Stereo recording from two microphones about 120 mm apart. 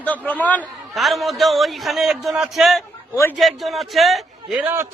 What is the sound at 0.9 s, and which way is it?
A man's voice, centre (ahead or behind).